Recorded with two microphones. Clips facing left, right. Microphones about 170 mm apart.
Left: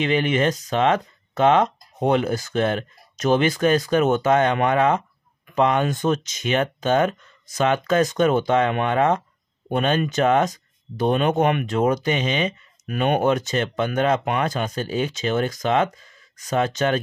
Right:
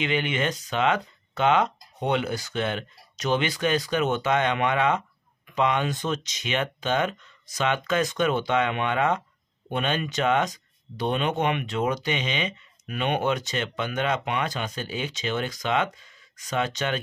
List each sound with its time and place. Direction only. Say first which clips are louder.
0.0 s speech: left 6 dB; 40° left (ahead or behind)